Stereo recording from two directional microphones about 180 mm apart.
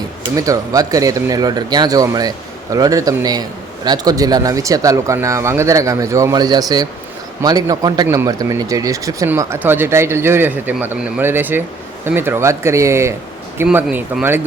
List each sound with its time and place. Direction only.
0.3 s speech: 20° right (ahead or behind)